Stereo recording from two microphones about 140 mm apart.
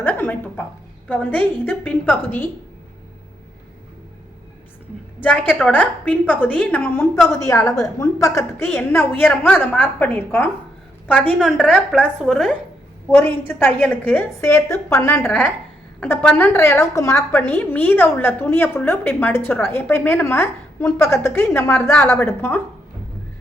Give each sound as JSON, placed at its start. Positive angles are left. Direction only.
{"t": 0.0, "sound": "a sound", "side_deg": 15}
{"t": 1.0, "sound": "a woman's voice", "side_deg": 10}
{"t": 5.2, "sound": "a woman's voice", "side_deg": 10}
{"t": 7.3, "sound": "a woman's voice", "side_deg": 20}
{"t": 13.1, "sound": "a woman's voice", "side_deg": 15}